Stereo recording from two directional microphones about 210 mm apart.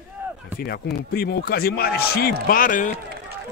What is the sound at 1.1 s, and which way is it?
Speech, 45° left (ahead or behind).